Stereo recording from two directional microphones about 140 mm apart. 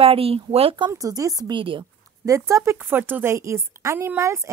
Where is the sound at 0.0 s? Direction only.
45° right (ahead or behind).